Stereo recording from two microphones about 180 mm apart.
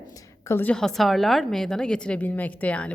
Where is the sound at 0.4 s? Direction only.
10° left (ahead or behind).